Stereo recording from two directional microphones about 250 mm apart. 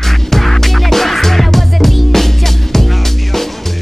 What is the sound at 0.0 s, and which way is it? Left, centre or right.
Music, centre.